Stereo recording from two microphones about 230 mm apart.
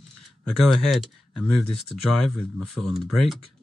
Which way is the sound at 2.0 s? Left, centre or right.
Left.